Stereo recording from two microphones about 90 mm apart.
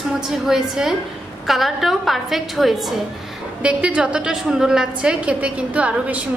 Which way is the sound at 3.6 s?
15° right (ahead or behind).